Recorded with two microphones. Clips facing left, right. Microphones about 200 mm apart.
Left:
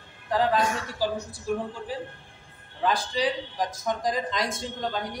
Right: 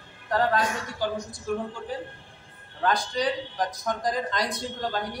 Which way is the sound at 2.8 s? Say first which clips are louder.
Even; centre (ahead or behind).